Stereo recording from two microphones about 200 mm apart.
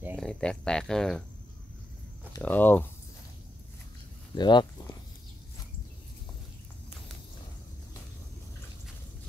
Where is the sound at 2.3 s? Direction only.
10° left (ahead or behind).